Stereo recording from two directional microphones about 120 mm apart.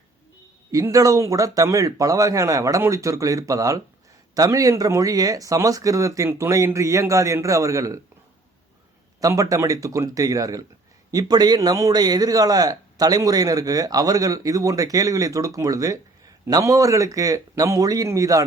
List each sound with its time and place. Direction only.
0.7 s speech: 25° right (ahead or behind)
9.2 s a man's voice: 30° right (ahead or behind)